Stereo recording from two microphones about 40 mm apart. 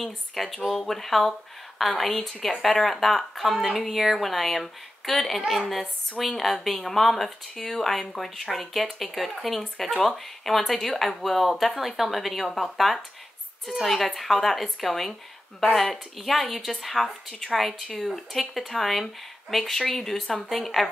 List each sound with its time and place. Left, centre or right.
0.0 s speech: centre